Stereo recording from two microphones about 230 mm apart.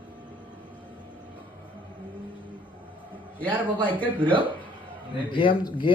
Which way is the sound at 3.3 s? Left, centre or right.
Centre.